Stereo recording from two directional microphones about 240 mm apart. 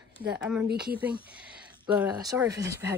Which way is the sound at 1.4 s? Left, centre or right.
Centre.